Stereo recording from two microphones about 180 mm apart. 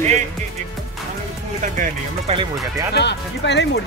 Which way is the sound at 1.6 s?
45° right (ahead or behind).